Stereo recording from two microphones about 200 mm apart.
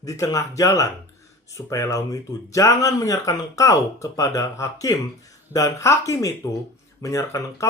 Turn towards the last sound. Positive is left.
turn(degrees=15)  # may be behind; listen again after turning